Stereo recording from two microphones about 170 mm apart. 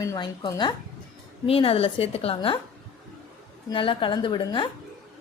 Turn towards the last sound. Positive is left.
turn(degrees=25)  # may be behind; listen again after turning